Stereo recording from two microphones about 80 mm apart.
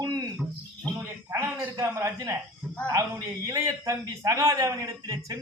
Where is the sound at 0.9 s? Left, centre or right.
Right.